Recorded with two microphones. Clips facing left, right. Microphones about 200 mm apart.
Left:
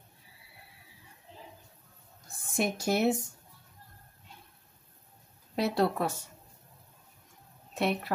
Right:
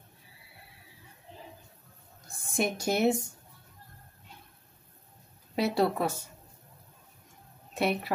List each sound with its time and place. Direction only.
2.5 s speech: centre (ahead or behind)
5.6 s speech: centre (ahead or behind)
7.7 s a woman's voice: 5° right (ahead or behind)